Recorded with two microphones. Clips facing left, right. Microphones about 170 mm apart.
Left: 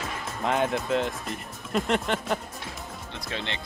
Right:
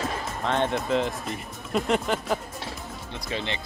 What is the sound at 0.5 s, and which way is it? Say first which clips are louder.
Speech: even; 5° left (ahead or behind).